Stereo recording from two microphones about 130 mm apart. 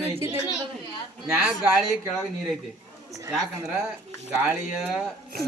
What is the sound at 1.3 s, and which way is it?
Speech, 5° right (ahead or behind).